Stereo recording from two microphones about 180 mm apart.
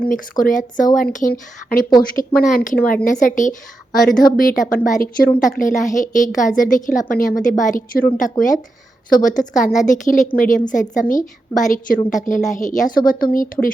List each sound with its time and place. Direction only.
0.0 s a woman's voice: 50° left (ahead or behind)